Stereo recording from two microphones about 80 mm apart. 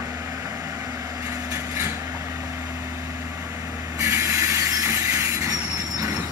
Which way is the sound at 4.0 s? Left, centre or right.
Right.